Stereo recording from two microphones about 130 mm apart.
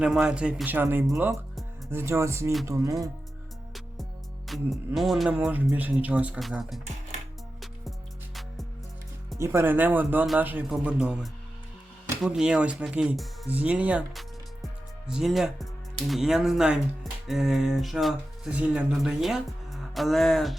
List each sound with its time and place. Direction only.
0.0 s speech: 5° right (ahead or behind); by 2.9 s 25° right (ahead or behind)
4.4 s music: centre (ahead or behind)
4.9 s speech: centre (ahead or behind)
9.4 s speech: 20° right (ahead or behind); by 20.6 s centre (ahead or behind)